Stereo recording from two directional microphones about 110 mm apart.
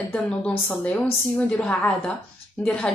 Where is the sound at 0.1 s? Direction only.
15° left (ahead or behind).